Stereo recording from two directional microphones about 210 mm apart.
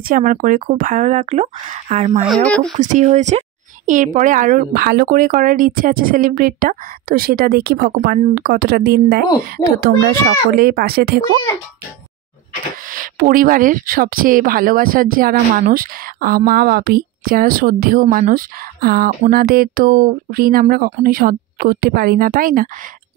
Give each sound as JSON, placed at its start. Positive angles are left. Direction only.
{"t": 0.1, "sound": "a woman's voice", "side_deg": -40}
{"t": 2.2, "sound": "speech", "side_deg": 5}
{"t": 2.8, "sound": "a woman's voice", "side_deg": -35}
{"t": 12.9, "sound": "speech", "side_deg": -40}